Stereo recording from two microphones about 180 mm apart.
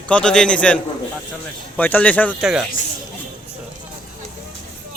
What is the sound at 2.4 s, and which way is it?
Speech, 5° right (ahead or behind).